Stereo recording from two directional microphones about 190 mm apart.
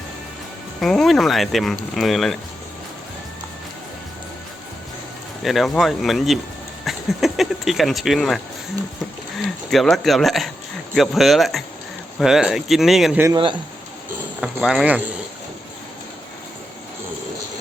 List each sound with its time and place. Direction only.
0.8 s speech: centre (ahead or behind)
5.4 s speech: centre (ahead or behind)
9.4 s speech: centre (ahead or behind)
13.2 s speech: 25° right (ahead or behind)
14.4 s speech: centre (ahead or behind)